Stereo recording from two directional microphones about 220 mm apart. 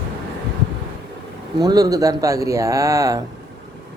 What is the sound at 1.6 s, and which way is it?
Speech, 15° right (ahead or behind).